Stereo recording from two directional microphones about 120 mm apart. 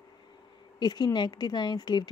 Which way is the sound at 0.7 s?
35° left (ahead or behind).